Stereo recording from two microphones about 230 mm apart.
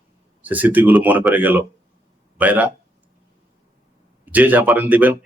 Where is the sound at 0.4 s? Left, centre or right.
Centre.